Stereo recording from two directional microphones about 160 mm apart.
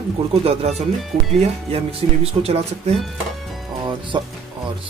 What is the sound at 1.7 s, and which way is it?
Speech, 40° right (ahead or behind).